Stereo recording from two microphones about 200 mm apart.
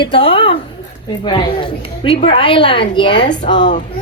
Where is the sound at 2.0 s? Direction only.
25° left (ahead or behind).